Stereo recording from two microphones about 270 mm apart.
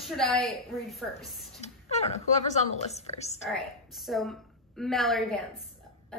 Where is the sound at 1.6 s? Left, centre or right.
Left.